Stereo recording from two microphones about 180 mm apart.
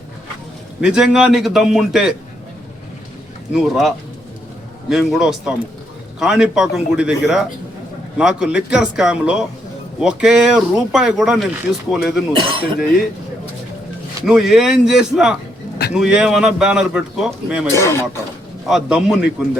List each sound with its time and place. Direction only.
0.8 s speech: 5° right (ahead or behind)
3.5 s speech: centre (ahead or behind)
12.4 s speech: 25° right (ahead or behind)
14.3 s speech: centre (ahead or behind)
17.7 s a man's voice: 15° left (ahead or behind)
18.7 s speech: 5° right (ahead or behind)